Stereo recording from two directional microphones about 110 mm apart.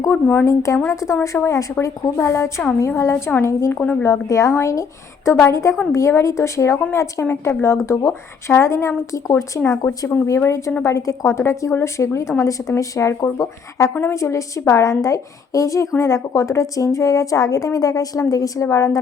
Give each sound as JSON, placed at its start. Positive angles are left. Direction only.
{"t": 0.1, "sound": "speech", "side_deg": 15}
{"t": 0.4, "sound": "a woman's voice", "side_deg": 30}